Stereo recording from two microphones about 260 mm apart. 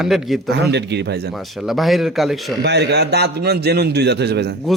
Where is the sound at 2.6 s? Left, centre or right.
Right.